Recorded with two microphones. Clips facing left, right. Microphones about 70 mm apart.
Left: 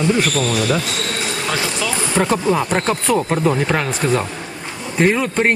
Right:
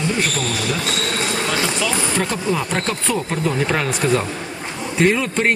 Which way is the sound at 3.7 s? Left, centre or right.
Centre.